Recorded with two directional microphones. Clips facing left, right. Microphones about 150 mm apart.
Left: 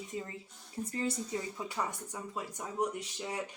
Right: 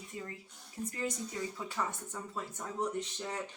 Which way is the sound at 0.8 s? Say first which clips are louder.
Left 1 dB; 30° left (ahead or behind).